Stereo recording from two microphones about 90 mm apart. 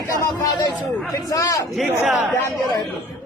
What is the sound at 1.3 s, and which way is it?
Speech, 40° left (ahead or behind).